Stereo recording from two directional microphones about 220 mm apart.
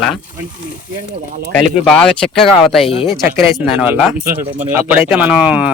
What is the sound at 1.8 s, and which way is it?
Speech, 5° left (ahead or behind).